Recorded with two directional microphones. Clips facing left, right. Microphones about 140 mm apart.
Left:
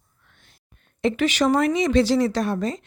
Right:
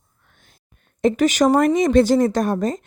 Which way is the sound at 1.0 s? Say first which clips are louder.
Right 4 dB; 45° right (ahead or behind).